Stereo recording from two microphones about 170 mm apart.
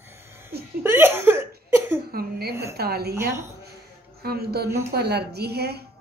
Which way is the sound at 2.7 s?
70° right (ahead or behind).